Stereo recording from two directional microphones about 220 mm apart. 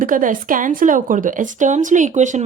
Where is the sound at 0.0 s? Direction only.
35° right (ahead or behind).